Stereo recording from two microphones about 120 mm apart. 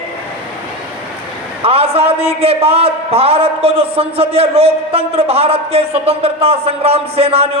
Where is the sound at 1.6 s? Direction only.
55° right (ahead or behind).